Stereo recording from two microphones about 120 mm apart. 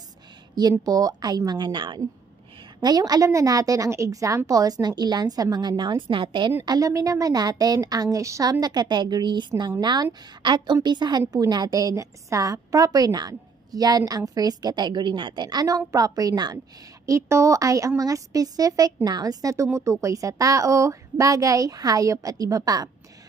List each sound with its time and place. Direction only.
0.6 s a woman's voice: 35° right (ahead or behind)
6.6 s a woman's voice: 30° right (ahead or behind)